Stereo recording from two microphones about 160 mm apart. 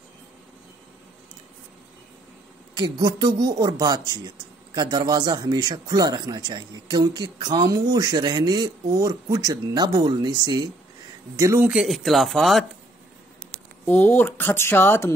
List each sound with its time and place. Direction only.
2.7 s a man's voice: 25° right (ahead or behind)
11.7 s speech: centre (ahead or behind)
13.8 s speech: 10° left (ahead or behind)